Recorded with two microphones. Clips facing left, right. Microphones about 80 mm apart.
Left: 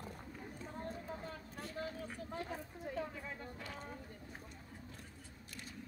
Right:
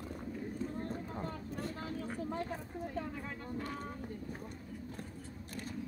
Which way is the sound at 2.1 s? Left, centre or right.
Right.